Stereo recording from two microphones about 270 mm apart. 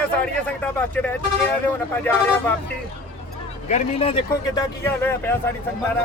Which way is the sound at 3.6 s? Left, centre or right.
Left.